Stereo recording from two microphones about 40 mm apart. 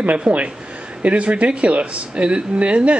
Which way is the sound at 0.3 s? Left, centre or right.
Right.